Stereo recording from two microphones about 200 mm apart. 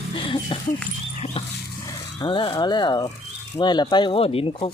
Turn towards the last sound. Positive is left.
turn(degrees=30)  # may be behind; listen again after turning